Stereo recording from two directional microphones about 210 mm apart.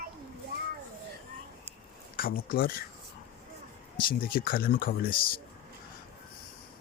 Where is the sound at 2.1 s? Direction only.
45° left (ahead or behind).